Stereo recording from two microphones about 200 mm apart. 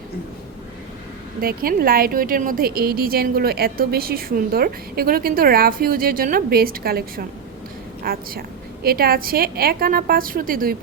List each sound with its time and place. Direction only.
1.4 s a woman's voice: 45° right (ahead or behind)